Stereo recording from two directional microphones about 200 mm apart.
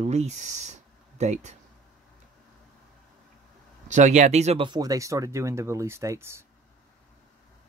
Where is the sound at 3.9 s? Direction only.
35° right (ahead or behind); by 6.4 s 15° right (ahead or behind).